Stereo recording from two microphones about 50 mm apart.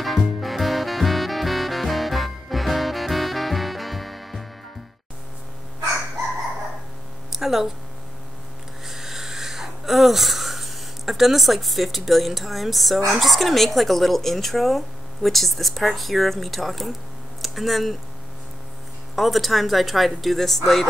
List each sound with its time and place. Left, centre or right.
0.0 s music: centre
7.3 s a sound: centre
8.8 s wheeze: centre
13.2 s speech: centre
19.1 s speech: centre